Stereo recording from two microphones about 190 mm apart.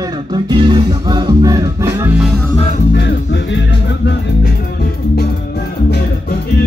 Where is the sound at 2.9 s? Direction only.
65° left (ahead or behind).